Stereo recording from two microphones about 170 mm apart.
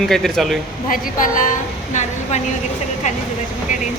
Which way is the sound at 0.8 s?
50° left (ahead or behind).